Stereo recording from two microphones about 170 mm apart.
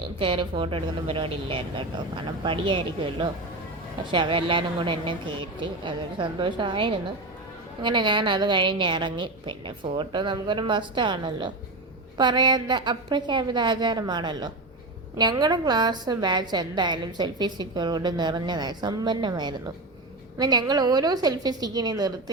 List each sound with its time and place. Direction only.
0.2 s a woman's voice: 30° right (ahead or behind)